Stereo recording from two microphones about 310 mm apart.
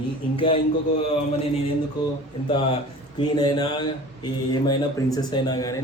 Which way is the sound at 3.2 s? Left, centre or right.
Centre.